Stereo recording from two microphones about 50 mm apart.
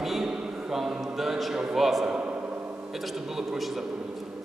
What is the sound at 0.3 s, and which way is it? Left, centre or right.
A man's voice, centre.